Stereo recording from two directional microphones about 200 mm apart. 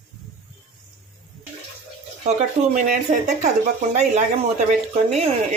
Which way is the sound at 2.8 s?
40° right (ahead or behind).